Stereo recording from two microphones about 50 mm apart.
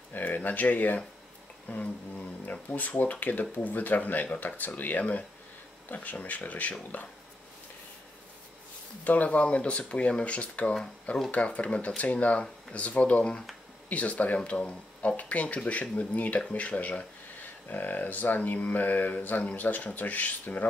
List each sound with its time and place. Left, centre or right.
0.1 s speech: left
9.0 s speech: left